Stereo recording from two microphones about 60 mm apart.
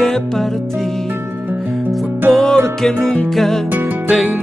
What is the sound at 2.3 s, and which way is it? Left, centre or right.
Music, centre.